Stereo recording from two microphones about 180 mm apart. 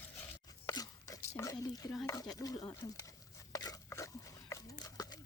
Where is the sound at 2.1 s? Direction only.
20° left (ahead or behind).